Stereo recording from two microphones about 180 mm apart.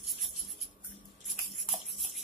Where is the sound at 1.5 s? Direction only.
Centre (ahead or behind).